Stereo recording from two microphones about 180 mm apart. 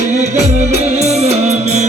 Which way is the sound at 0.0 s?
40° right (ahead or behind).